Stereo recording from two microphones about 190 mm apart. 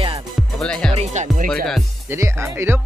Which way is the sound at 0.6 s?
5° left (ahead or behind).